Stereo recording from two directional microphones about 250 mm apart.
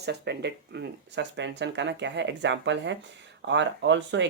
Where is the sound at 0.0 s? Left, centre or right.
Right.